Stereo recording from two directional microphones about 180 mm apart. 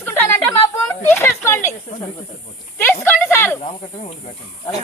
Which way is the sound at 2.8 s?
10° left (ahead or behind).